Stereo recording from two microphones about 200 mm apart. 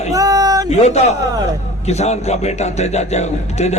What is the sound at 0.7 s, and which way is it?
A man's voice, 35° left (ahead or behind).